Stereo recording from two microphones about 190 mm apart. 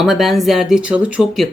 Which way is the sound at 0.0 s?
Centre (ahead or behind).